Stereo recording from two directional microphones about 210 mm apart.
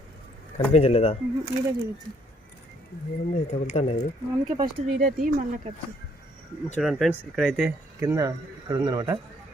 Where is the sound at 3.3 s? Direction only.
30° left (ahead or behind).